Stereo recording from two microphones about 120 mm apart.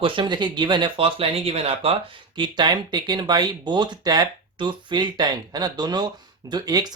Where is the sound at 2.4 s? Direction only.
40° right (ahead or behind).